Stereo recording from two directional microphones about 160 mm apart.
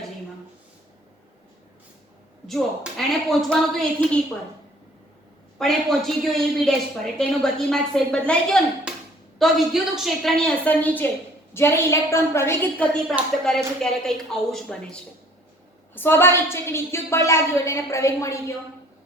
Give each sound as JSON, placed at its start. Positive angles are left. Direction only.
{"t": 2.5, "sound": "a woman's voice", "side_deg": 0}
{"t": 5.5, "sound": "a woman's voice", "side_deg": 5}
{"t": 8.9, "sound": "a sound", "side_deg": -5}
{"t": 9.4, "sound": "a woman's voice", "side_deg": 0}
{"t": 13.4, "sound": "a woman's voice", "side_deg": 5}